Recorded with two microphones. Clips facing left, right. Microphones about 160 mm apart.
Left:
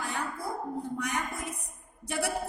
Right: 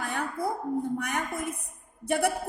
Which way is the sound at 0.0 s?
55° right (ahead or behind).